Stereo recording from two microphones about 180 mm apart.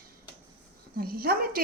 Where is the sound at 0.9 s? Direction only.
55° right (ahead or behind).